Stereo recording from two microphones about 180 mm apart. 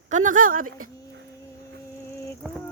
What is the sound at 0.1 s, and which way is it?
Speech, 45° right (ahead or behind).